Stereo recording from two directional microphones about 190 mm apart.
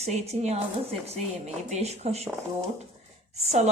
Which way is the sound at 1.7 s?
35° right (ahead or behind).